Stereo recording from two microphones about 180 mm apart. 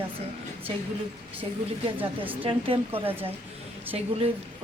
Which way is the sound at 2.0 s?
10° right (ahead or behind).